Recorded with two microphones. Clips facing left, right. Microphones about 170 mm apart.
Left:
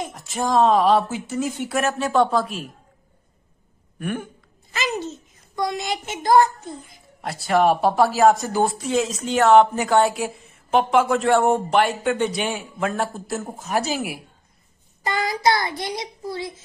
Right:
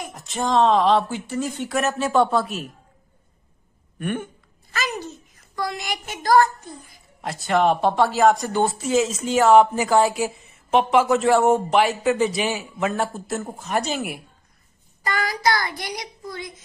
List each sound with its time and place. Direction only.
0.1 s speech: centre (ahead or behind)
4.0 s speech: centre (ahead or behind)
4.7 s a child's voice: 25° left (ahead or behind)
7.2 s speech: centre (ahead or behind)
15.0 s child singing: 20° left (ahead or behind)